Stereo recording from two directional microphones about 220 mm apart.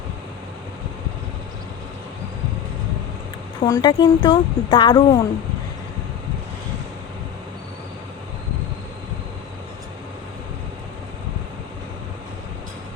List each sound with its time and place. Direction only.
3.6 s speech: 20° left (ahead or behind)